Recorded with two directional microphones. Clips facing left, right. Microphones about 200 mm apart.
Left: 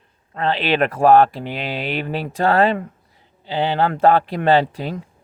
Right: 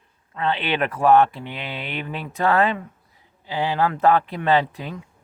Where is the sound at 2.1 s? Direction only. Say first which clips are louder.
Left 2 dB; 30° left (ahead or behind).